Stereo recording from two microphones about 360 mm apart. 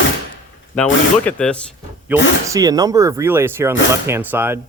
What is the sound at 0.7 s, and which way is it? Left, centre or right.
Speech, centre.